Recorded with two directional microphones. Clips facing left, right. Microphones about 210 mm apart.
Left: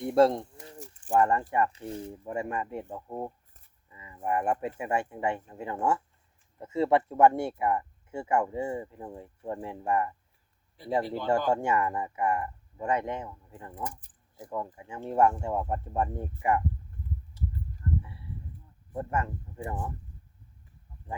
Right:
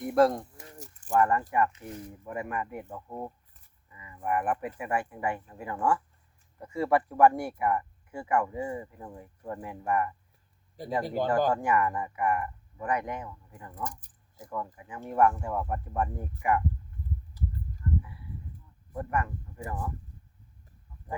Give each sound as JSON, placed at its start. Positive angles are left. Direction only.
{"t": 0.0, "sound": "speech", "side_deg": 25}
{"t": 10.8, "sound": "speech", "side_deg": -40}
{"t": 11.3, "sound": "speech", "side_deg": 25}
{"t": 18.0, "sound": "a sound", "side_deg": 25}
{"t": 18.9, "sound": "speech", "side_deg": 25}